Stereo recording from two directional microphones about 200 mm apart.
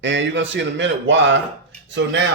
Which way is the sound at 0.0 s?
65° right (ahead or behind).